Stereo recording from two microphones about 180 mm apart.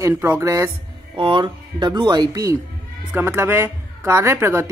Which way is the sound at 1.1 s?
25° right (ahead or behind).